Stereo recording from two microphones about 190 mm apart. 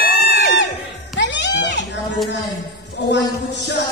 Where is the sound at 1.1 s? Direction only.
65° left (ahead or behind).